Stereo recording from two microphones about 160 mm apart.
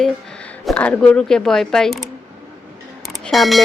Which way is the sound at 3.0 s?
Centre (ahead or behind).